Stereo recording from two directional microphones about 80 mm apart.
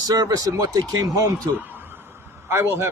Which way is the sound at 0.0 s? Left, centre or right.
Right.